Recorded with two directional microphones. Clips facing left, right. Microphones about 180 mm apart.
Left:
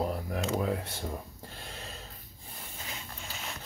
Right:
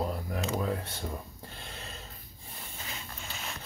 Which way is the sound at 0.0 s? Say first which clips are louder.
Left 1 dB; 20° left (ahead or behind).